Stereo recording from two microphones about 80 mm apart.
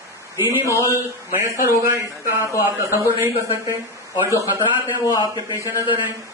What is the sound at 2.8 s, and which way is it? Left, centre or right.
Speech, right.